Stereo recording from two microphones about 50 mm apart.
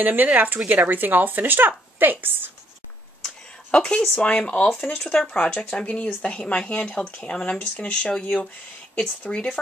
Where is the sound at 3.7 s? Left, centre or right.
Left.